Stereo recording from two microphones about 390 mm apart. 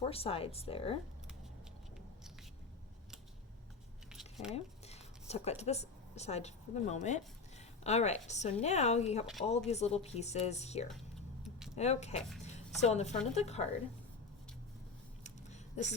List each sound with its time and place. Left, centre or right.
0.0 s a woman's voice: centre
4.1 s squish: centre
4.5 s a woman's voice: centre
15.2 s a sound: centre